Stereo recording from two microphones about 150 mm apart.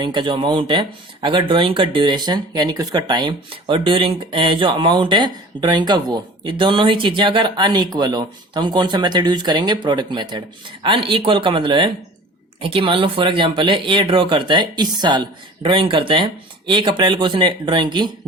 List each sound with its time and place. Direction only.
0.0 s speech: 30° right (ahead or behind)